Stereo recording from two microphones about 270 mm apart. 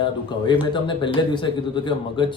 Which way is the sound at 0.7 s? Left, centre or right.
Centre.